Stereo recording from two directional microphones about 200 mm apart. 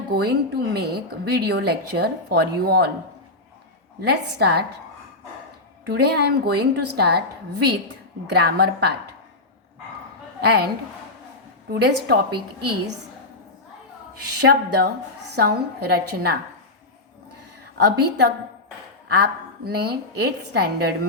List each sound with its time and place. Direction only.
0.1 s a woman's voice: 55° right (ahead or behind)
4.0 s a woman's voice: 55° right (ahead or behind)
5.8 s a woman's voice: 55° right (ahead or behind)
10.4 s a woman's voice: 55° right (ahead or behind)
11.7 s a woman's voice: 55° right (ahead or behind)
14.4 s a woman's voice: 55° right (ahead or behind)
17.7 s a woman's voice: 55° right (ahead or behind)